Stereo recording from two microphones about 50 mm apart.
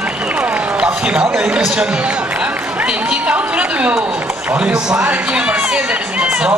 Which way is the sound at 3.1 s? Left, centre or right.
Right.